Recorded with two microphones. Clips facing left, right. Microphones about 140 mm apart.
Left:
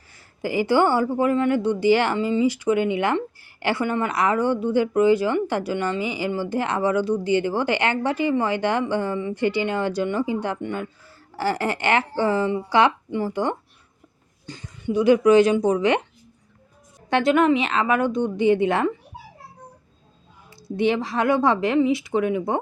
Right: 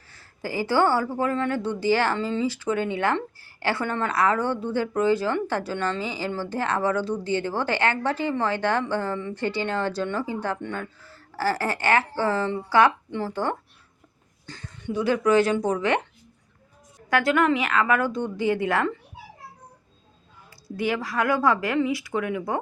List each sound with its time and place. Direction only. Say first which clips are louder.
0.1 s a woman's voice: left 5 dB; 15° left (ahead or behind)
17.1 s speech: left 3 dB; 25° left (ahead or behind)
20.7 s speech: left 5 dB; 25° left (ahead or behind)